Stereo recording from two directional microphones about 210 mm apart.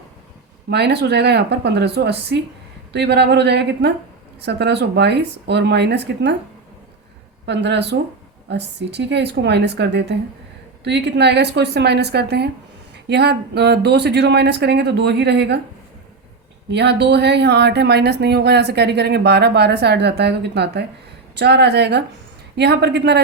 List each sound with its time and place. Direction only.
0.7 s speech: 50° right (ahead or behind)
7.4 s speech: 55° right (ahead or behind)
16.7 s speech: 55° right (ahead or behind)